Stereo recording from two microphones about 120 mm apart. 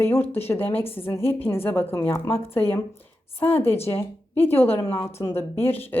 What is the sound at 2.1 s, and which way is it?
A woman's voice, 25° left (ahead or behind).